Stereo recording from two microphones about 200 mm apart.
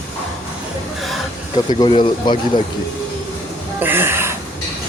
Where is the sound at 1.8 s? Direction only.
25° left (ahead or behind).